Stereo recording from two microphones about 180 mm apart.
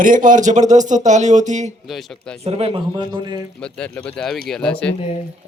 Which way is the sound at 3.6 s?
5° left (ahead or behind).